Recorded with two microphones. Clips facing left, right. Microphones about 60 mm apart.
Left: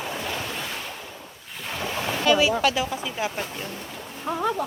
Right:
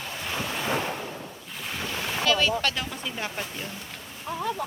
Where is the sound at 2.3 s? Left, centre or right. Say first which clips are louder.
Left 5 dB; centre.